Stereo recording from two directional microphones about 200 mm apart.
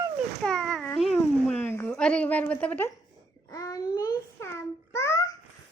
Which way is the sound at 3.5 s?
15° left (ahead or behind).